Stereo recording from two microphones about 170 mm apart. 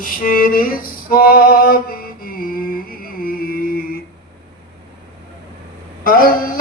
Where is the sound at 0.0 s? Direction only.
55° left (ahead or behind).